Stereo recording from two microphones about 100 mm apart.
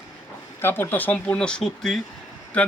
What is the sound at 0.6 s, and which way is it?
Speech, 20° left (ahead or behind).